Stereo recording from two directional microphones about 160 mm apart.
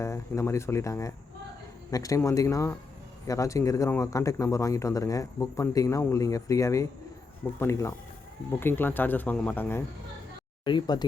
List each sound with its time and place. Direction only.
0.0 s speech: 20° left (ahead or behind)
10.6 s speech: 30° left (ahead or behind)